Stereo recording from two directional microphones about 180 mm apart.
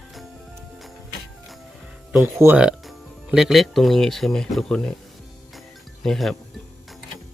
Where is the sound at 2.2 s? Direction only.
10° right (ahead or behind).